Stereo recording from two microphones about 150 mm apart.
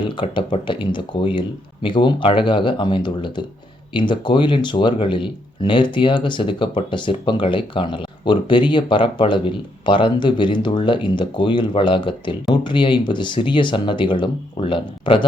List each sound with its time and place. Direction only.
0.2 s speech: 35° left (ahead or behind)